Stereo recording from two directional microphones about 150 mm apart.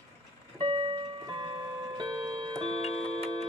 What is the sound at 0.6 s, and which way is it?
Music, 35° right (ahead or behind).